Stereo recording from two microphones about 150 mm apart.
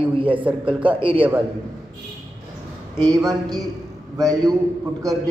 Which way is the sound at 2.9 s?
25° right (ahead or behind).